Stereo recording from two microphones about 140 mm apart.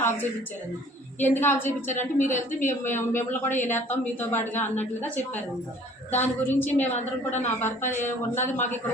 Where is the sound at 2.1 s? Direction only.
65° left (ahead or behind).